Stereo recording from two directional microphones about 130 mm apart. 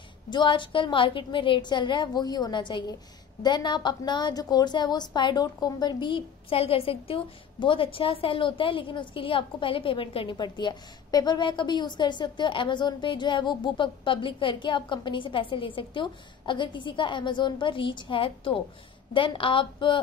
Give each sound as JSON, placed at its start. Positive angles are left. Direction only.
{"t": 0.3, "sound": "a woman's voice", "side_deg": 40}